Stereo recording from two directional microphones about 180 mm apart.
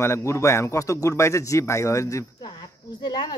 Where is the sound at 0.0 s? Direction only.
15° left (ahead or behind).